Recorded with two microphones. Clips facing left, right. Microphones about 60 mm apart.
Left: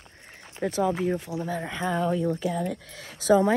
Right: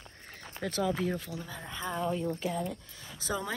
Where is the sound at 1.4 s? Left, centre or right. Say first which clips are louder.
Left 10 dB; left.